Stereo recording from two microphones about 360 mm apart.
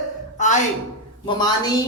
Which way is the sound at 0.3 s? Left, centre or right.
Centre.